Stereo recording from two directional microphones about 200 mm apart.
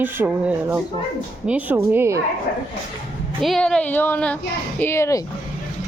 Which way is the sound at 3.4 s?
Centre (ahead or behind).